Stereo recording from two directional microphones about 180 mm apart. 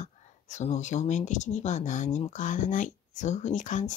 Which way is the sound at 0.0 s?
40° left (ahead or behind).